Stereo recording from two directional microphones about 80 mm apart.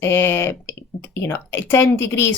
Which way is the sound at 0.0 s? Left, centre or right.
Left.